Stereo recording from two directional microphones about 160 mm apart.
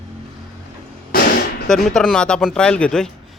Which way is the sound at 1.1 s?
70° left (ahead or behind).